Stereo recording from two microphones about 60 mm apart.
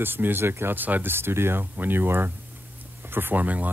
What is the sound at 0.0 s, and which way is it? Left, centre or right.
Speech, right.